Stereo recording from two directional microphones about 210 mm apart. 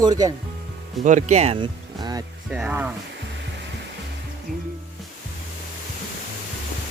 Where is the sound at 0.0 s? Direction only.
15° right (ahead or behind).